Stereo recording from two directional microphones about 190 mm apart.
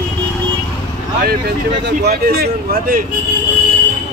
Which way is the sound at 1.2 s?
55° right (ahead or behind).